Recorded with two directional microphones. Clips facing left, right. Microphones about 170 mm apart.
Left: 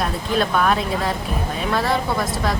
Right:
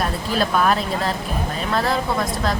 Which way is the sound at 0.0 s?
Centre (ahead or behind).